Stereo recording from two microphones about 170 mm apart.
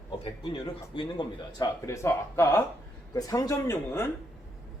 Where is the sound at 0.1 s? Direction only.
25° left (ahead or behind).